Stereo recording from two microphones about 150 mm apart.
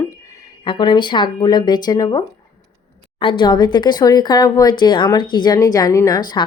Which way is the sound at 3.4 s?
30° left (ahead or behind).